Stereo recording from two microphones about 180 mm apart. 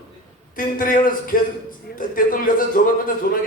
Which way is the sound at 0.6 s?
50° left (ahead or behind).